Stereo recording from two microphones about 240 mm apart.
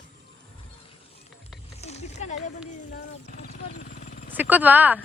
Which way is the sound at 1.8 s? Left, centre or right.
Left.